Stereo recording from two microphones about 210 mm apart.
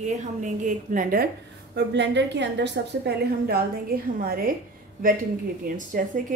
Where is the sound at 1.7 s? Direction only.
55° right (ahead or behind).